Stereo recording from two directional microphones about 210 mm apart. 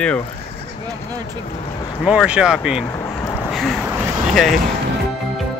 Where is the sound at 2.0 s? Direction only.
5° right (ahead or behind).